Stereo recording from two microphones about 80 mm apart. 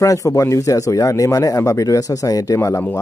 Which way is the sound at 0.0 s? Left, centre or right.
Left.